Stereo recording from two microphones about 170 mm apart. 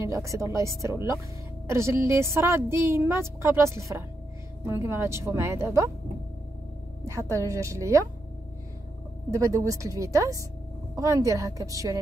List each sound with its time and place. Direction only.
0.0 s a woman's voice: 20° right (ahead or behind)
7.1 s a woman's voice: 15° right (ahead or behind)
9.3 s a woman's voice: 20° right (ahead or behind)